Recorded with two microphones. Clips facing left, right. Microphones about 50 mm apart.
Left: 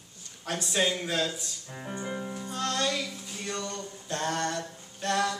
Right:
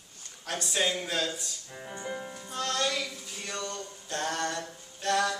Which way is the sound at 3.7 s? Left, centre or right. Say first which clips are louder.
Left 1 dB; left.